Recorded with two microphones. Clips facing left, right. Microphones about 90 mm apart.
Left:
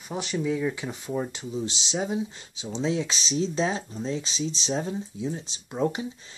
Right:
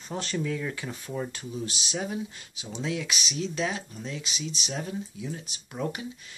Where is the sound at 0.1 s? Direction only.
15° left (ahead or behind).